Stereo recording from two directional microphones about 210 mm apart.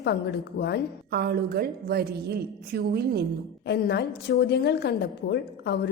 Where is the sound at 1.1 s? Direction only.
50° right (ahead or behind).